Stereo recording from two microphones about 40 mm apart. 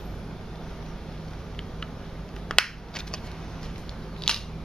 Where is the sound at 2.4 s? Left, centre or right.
Centre.